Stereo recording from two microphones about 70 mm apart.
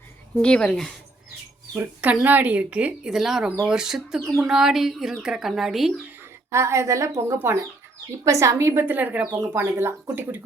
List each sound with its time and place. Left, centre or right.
0.4 s speech: centre
1.8 s speech: right
3.1 s speech: centre
4.4 s a sound: centre
6.5 s a woman's voice: right
7.3 s speech: right
8.2 s a woman's voice: right
8.9 s speech: right
9.4 s speech: right